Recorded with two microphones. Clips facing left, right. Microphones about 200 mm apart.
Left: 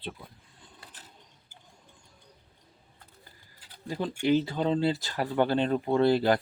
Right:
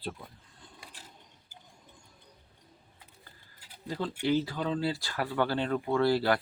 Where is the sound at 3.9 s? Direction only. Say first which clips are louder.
Left 3 dB; 15° left (ahead or behind).